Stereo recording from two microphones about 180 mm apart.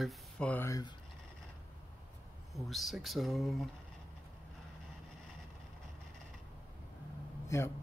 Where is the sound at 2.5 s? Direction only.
Centre (ahead or behind).